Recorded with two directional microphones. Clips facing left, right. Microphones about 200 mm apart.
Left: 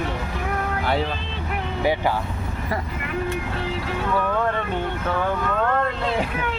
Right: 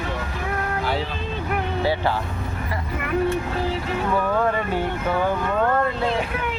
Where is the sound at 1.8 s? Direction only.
15° left (ahead or behind).